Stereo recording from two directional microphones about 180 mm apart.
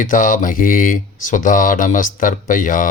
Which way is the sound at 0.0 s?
45° left (ahead or behind).